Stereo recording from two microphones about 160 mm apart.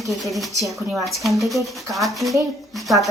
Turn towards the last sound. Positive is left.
turn(degrees=0)  # may be behind; listen again after turning